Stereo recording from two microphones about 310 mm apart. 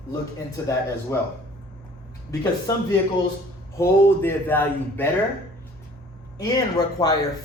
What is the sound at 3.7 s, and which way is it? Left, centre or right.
Speech, centre.